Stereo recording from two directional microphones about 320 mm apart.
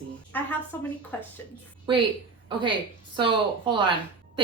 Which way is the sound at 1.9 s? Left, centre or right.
Centre.